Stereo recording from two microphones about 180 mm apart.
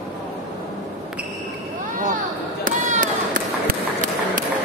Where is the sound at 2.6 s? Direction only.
50° right (ahead or behind).